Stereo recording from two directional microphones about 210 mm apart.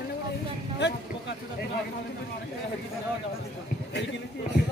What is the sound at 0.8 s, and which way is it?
Speech, 55° left (ahead or behind).